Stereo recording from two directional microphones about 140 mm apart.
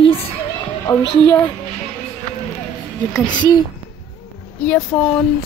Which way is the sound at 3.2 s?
30° left (ahead or behind).